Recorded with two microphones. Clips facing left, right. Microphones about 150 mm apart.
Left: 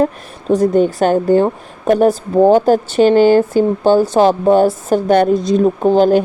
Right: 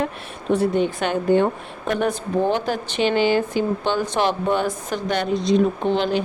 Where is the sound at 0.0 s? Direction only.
40° left (ahead or behind).